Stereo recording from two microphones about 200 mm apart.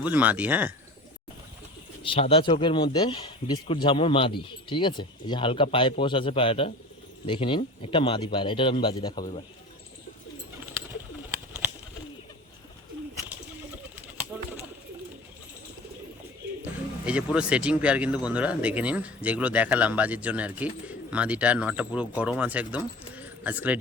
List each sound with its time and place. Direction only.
0.0 s speech: 10° right (ahead or behind)
2.0 s speech: 30° left (ahead or behind)
17.1 s speech: 5° right (ahead or behind)